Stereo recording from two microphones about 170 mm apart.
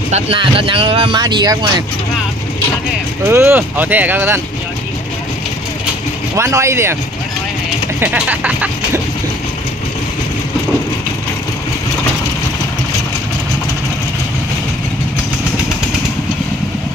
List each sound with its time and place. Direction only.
0.1 s speech: 35° right (ahead or behind)
3.3 s speech: 15° right (ahead or behind)
6.3 s speech: 15° right (ahead or behind)
8.0 s speech: 10° right (ahead or behind)